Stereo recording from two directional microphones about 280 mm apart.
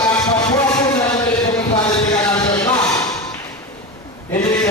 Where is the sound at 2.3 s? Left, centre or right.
Centre.